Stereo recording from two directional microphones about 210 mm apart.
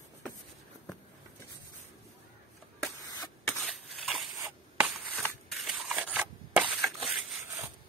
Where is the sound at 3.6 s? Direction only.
Centre (ahead or behind).